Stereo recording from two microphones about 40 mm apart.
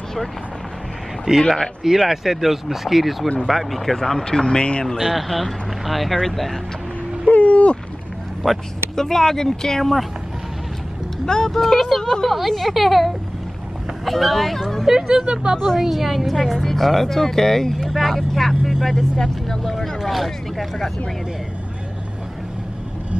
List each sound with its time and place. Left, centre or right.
1.3 s a woman's voice: centre
4.2 s speech: centre
4.9 s a woman's voice: centre
7.2 s a sound: left
8.4 s a woman's voice: centre
11.2 s a woman's voice: centre
14.9 s speech: centre
15.5 s a woman's voice: centre
15.8 s a woman's voice: centre
19.1 s a woman's voice: centre